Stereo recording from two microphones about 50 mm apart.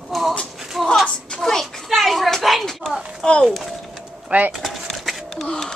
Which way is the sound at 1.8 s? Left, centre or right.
Centre.